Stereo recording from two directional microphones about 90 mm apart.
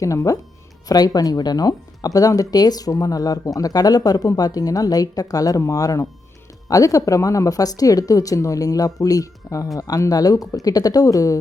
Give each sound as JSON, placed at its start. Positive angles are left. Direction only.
{"t": 0.0, "sound": "speech", "side_deg": 40}